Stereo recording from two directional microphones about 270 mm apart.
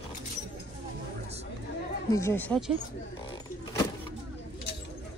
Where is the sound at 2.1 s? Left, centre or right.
Centre.